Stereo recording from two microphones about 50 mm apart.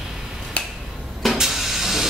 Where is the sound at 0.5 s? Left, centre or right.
Left.